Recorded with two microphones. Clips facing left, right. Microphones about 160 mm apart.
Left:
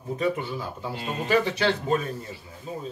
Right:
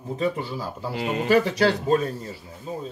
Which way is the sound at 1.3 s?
35° right (ahead or behind).